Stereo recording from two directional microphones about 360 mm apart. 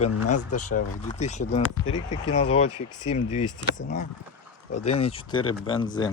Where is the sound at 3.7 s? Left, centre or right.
Left.